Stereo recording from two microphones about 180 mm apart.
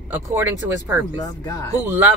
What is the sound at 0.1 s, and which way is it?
Speech, 10° right (ahead or behind).